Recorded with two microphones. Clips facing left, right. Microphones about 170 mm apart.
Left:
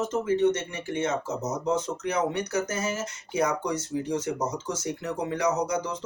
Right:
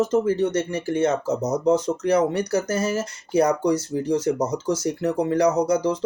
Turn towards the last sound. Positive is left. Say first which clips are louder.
# right 7 dB
turn(degrees=-35)  # may be behind; listen again after turning